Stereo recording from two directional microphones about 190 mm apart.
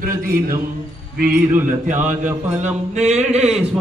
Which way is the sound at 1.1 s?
45° right (ahead or behind).